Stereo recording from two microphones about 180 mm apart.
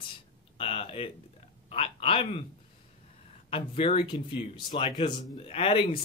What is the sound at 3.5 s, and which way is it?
Speech, 30° left (ahead or behind).